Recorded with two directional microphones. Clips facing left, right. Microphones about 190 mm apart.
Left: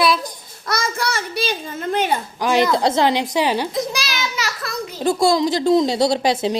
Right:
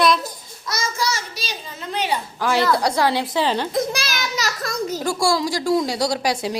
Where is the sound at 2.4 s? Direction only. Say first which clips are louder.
Left 2 dB; 20° left (ahead or behind).